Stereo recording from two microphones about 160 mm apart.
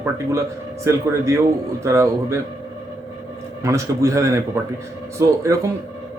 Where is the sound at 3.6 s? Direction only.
20° right (ahead or behind).